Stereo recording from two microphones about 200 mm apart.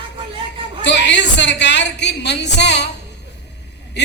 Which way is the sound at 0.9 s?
60° left (ahead or behind).